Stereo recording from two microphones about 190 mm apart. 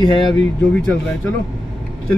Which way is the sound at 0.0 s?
25° left (ahead or behind).